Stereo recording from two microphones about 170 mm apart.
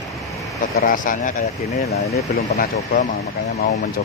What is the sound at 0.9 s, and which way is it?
Speech, 50° left (ahead or behind).